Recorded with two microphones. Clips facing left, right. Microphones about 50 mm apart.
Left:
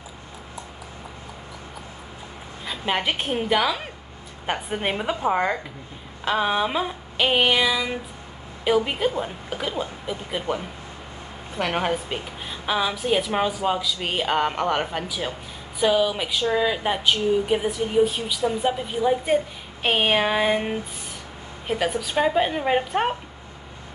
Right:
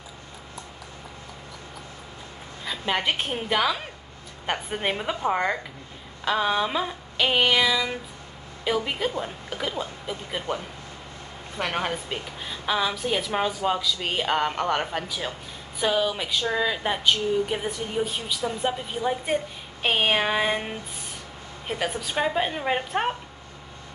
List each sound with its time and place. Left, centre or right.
2.6 s a woman's voice: centre